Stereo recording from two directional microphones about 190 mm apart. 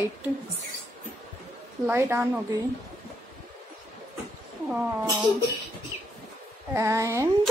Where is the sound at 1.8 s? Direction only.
10° right (ahead or behind).